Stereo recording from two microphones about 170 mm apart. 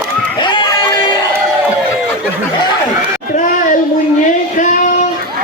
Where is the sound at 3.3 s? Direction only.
50° left (ahead or behind).